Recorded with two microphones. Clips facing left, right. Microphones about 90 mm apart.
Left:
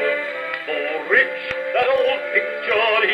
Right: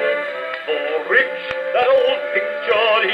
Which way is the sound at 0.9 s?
40° right (ahead or behind).